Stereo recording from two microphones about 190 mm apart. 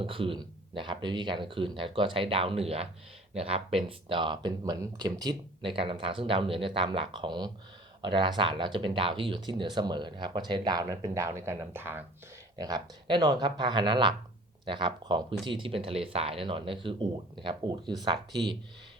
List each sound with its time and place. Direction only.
0.0 s speech: 30° right (ahead or behind)